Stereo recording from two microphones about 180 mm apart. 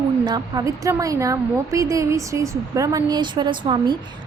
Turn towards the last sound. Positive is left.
turn(degrees=-25)  # may be behind; listen again after turning